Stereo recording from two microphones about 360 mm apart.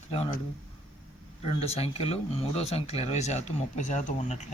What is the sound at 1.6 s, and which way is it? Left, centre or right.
Speech, centre.